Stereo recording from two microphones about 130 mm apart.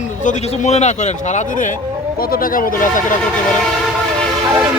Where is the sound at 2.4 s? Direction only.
90° left.